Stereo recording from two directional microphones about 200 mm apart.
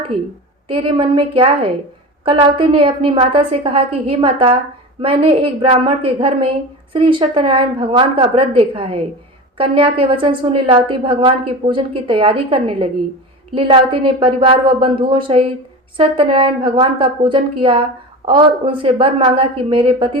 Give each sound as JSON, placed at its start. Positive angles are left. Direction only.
{"t": 0.7, "sound": "a woman's voice", "side_deg": -25}